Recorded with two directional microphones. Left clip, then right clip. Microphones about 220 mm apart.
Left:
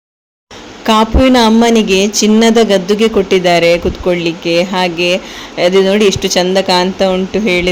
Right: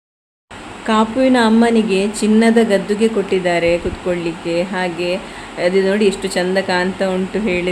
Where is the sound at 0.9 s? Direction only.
35° left (ahead or behind).